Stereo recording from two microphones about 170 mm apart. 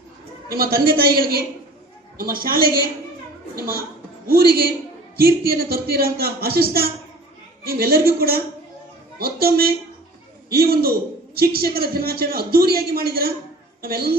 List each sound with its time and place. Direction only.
0.4 s a man's voice: 60° right (ahead or behind)
5.1 s a man's voice: 60° right (ahead or behind)